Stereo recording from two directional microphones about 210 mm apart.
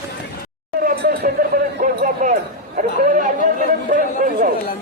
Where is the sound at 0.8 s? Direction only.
45° right (ahead or behind).